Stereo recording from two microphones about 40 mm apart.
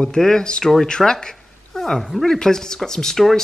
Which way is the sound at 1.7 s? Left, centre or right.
Centre.